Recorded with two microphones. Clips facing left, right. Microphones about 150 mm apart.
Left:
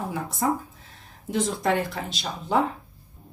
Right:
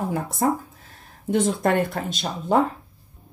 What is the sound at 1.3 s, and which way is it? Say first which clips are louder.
Speech: right 4 dB; 55° right (ahead or behind).